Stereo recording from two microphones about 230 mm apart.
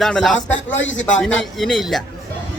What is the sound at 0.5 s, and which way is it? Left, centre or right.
Speech, left.